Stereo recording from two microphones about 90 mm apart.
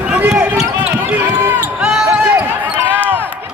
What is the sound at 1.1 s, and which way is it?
Basketball bounce, 20° right (ahead or behind).